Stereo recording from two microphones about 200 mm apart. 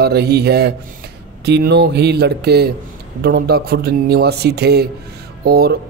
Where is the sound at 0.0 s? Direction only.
55° right (ahead or behind).